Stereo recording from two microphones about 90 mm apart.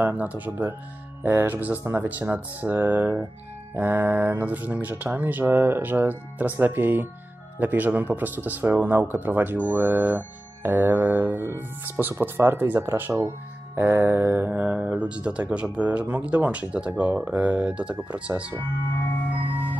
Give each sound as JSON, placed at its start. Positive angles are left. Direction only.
{"t": 0.0, "sound": "speech", "side_deg": -15}
{"t": 19.3, "sound": "music", "side_deg": -20}